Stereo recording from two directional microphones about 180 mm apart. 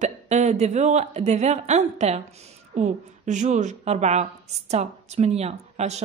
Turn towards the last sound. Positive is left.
turn(degrees=-35)  # may be behind; listen again after turning